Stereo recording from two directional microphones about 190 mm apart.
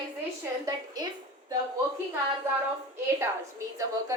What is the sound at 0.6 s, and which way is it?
Speech, 20° right (ahead or behind).